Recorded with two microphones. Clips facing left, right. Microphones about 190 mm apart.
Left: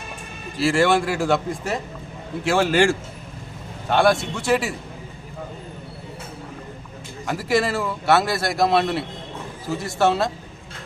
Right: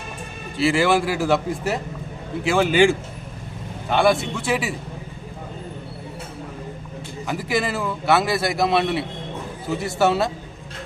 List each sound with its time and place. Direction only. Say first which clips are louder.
0.6 s a man's voice: even; centre (ahead or behind)
7.3 s a man's voice: left 2 dB; centre (ahead or behind)